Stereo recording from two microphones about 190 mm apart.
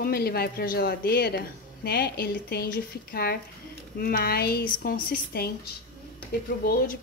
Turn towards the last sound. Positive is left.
turn(degrees=50)  # may be behind; listen again after turning